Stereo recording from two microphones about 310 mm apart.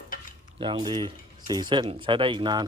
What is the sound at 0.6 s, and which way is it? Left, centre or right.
Speech, centre.